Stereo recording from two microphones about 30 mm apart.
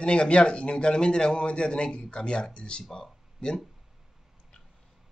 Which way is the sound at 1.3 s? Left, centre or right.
Left.